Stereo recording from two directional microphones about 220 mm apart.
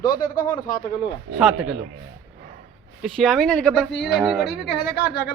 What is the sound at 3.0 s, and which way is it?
Speech, centre (ahead or behind).